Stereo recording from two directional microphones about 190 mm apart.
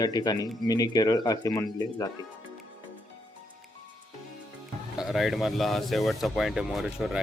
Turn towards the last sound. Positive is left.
turn(degrees=-5)  # may be behind; listen again after turning